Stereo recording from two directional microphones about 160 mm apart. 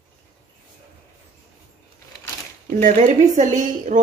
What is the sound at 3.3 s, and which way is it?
Speech, 50° right (ahead or behind).